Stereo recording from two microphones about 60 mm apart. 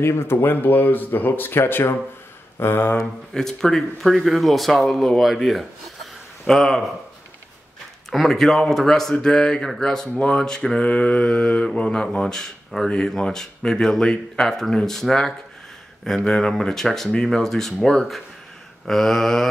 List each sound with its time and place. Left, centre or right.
0.0 s speech: left
3.3 s speech: centre
8.1 s mantra: centre
17.8 s speech: centre